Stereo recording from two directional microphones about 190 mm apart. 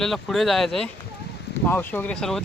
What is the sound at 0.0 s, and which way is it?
Speech, centre (ahead or behind).